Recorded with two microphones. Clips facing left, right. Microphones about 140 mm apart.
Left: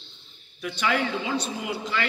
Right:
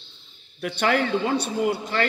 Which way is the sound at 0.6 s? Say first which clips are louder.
Right 3 dB; 60° right (ahead or behind).